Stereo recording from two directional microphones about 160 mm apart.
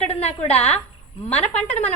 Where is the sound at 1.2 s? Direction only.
10° left (ahead or behind).